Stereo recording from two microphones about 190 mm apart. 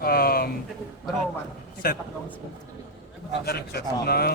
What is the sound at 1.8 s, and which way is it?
Speech, 50° left (ahead or behind).